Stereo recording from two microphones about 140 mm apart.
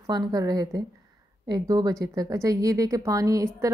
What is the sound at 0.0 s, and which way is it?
Speech, 30° right (ahead or behind).